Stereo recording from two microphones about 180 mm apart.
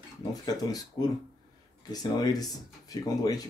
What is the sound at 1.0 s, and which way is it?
Speech, 20° left (ahead or behind).